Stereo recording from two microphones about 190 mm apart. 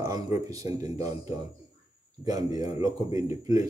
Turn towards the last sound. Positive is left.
turn(degrees=-20)  # may be behind; listen again after turning